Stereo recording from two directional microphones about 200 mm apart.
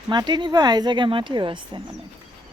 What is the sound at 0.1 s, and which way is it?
Speech, 20° right (ahead or behind).